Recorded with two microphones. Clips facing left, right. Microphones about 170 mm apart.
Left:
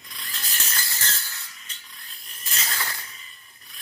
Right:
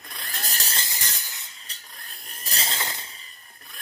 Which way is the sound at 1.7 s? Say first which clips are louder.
Right 2 dB; 35° right (ahead or behind).